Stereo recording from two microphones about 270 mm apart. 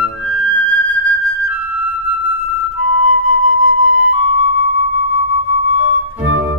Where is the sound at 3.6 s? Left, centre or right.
Left.